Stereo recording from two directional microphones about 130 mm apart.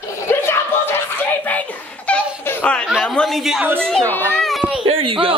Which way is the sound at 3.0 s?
5° left (ahead or behind).